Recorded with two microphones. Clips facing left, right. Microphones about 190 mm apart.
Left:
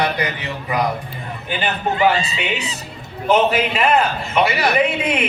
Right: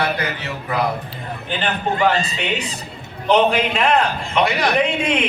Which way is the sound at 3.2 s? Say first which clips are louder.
Even; 5° left (ahead or behind).